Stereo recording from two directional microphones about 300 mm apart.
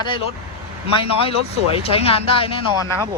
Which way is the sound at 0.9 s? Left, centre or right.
Centre.